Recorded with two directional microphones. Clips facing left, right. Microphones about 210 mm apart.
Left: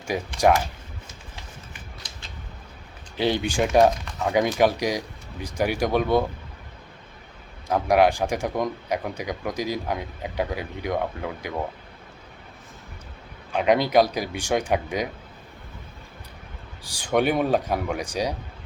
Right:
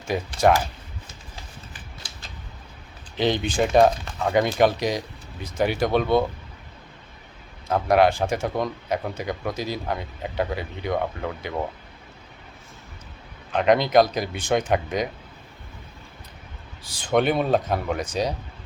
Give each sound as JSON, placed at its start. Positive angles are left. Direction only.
{"t": 0.1, "sound": "speech", "side_deg": 10}
{"t": 1.7, "sound": "a sound", "side_deg": -30}
{"t": 3.2, "sound": "speech", "side_deg": 10}
{"t": 4.2, "sound": "speech", "side_deg": 0}
{"t": 7.7, "sound": "speech", "side_deg": 10}
{"t": 13.5, "sound": "speech", "side_deg": 10}
{"t": 16.8, "sound": "speech", "side_deg": 15}